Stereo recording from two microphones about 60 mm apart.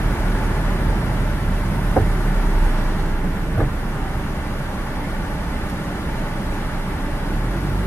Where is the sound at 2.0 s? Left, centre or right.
Left.